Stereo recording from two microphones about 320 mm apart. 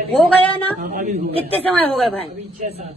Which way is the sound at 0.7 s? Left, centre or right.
Right.